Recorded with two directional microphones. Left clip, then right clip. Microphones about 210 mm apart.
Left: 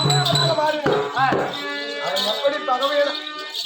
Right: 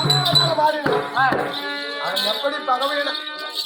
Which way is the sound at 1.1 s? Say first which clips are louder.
Right 3 dB; 20° right (ahead or behind).